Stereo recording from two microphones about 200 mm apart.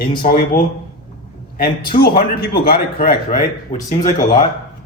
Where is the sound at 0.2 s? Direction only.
45° left (ahead or behind).